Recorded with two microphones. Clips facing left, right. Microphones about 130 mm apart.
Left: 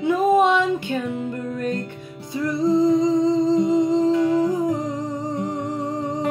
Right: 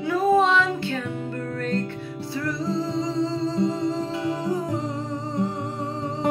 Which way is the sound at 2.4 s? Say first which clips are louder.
Left 8 dB; 15° left (ahead or behind).